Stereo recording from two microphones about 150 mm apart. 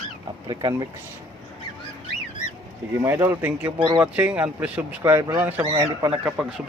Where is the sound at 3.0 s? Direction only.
15° right (ahead or behind).